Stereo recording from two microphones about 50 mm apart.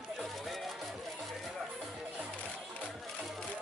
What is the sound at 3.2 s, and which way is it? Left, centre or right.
Music, centre.